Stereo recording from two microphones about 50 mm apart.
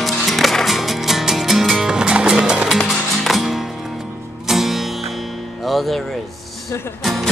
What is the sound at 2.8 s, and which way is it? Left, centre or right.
Music, centre.